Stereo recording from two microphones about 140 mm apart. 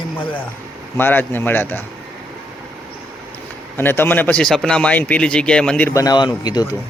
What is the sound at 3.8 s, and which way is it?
Speech, 15° left (ahead or behind).